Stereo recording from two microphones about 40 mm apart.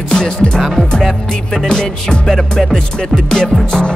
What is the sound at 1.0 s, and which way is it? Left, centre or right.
Music, centre.